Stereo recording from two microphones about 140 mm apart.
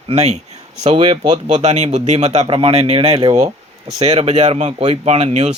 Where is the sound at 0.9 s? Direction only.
35° right (ahead or behind).